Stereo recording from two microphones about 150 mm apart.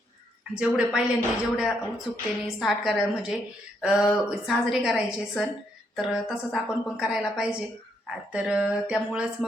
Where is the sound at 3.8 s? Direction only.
5° right (ahead or behind).